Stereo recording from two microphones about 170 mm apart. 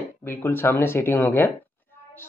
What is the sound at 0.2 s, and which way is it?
Speech, 10° left (ahead or behind).